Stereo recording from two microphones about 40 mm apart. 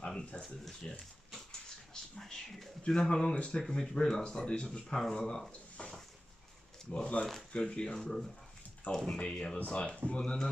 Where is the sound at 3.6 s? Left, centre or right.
Centre.